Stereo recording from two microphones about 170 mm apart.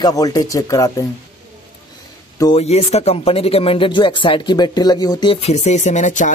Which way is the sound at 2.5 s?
40° left (ahead or behind).